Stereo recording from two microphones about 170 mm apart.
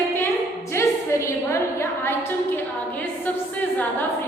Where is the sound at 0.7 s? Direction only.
15° left (ahead or behind).